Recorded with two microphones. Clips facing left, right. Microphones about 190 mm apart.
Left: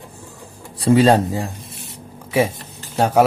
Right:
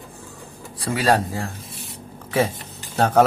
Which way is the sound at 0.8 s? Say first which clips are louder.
Left 7 dB; 25° left (ahead or behind).